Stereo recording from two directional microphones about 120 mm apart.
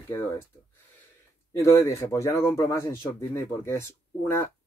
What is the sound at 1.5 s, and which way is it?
Speech, 25° left (ahead or behind).